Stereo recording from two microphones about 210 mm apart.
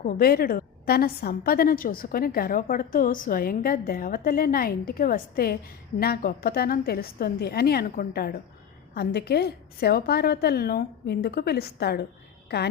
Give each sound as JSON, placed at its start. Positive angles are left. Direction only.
{"t": 0.0, "sound": "a woman's voice", "side_deg": 45}